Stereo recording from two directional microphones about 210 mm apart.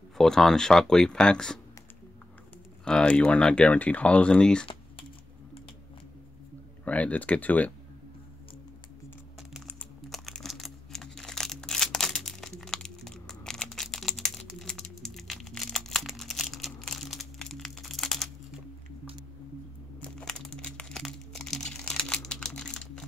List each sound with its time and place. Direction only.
0.2 s speech: centre (ahead or behind)
2.8 s speech: 5° left (ahead or behind)
6.8 s speech: 5° left (ahead or behind)
9.5 s crumpling: 5° left (ahead or behind)
20.0 s crumpling: 5° left (ahead or behind)